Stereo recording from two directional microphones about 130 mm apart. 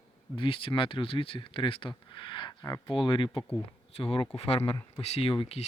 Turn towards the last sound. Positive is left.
turn(degrees=45)  # may be behind; listen again after turning